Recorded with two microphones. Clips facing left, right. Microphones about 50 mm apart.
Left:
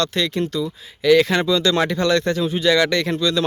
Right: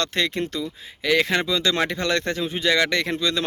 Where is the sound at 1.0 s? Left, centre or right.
Centre.